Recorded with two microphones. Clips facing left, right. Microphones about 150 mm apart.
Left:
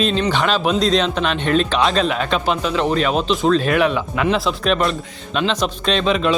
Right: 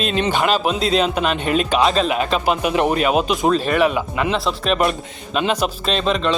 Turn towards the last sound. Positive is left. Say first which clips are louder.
# left 2 dB
turn(degrees=0)  # may be behind; listen again after turning